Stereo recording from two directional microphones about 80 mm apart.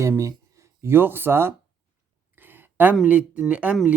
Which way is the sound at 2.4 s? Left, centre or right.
Right.